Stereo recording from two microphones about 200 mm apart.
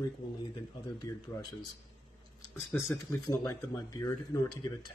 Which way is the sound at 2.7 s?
15° left (ahead or behind).